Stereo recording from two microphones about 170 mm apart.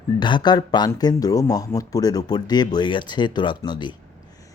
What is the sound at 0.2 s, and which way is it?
Speech, 25° left (ahead or behind).